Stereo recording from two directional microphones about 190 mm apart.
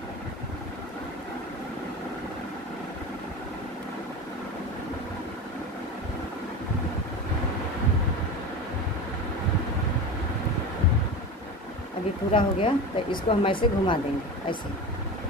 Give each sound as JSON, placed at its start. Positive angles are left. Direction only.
{"t": 12.3, "sound": "speech", "side_deg": 25}